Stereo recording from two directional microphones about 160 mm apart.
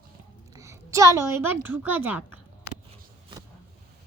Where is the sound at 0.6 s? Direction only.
20° right (ahead or behind).